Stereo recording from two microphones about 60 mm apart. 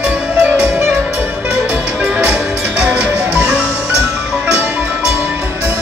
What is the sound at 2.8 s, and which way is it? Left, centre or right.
Music, right.